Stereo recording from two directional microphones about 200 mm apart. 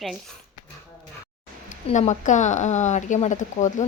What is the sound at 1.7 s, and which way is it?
Speech, 35° left (ahead or behind).